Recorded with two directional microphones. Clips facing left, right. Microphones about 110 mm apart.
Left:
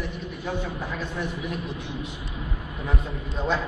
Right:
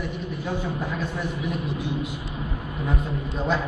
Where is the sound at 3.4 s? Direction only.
5° right (ahead or behind).